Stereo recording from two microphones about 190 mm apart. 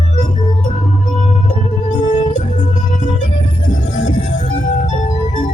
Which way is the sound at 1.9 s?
35° left (ahead or behind).